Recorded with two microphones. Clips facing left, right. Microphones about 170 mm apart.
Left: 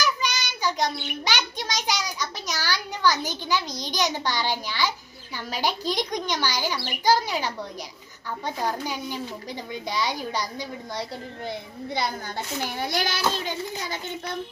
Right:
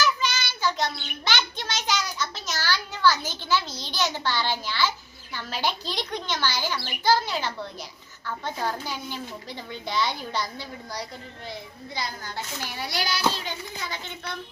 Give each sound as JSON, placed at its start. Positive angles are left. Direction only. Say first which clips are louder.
{"t": 0.0, "sound": "a child's voice", "louder": "right 1 dB", "side_deg": 15}
{"t": 11.9, "sound": "a woman's voice", "louder": "left 5 dB", "side_deg": 60}
{"t": 12.6, "sound": "child singing", "louder": "left 3 dB", "side_deg": 50}